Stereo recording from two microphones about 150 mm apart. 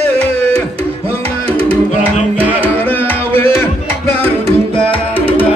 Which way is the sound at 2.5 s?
15° left (ahead or behind).